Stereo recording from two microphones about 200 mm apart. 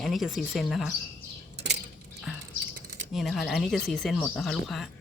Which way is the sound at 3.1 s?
Centre (ahead or behind).